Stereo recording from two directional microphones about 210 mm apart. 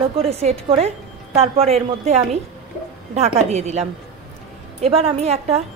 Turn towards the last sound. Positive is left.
turn(degrees=-30)  # may be behind; listen again after turning